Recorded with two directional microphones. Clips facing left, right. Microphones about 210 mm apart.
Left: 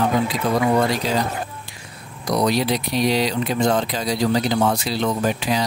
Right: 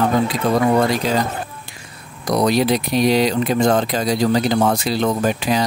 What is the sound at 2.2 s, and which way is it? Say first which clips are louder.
Speech: right 3 dB; 50° right (ahead or behind).